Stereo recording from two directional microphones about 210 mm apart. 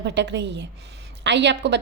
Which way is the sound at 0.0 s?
55° right (ahead or behind).